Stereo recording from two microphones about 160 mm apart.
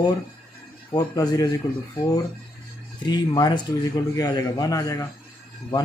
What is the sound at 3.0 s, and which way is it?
A man's voice, 25° left (ahead or behind).